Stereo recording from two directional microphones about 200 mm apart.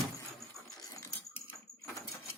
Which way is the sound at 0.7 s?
20° left (ahead or behind).